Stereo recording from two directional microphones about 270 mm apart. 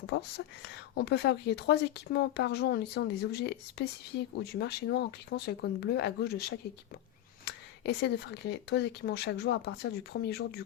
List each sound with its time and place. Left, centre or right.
0.1 s speech: left
7.4 s speech: left